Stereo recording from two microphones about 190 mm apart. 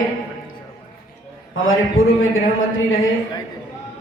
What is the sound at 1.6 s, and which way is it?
Speech, 90° left.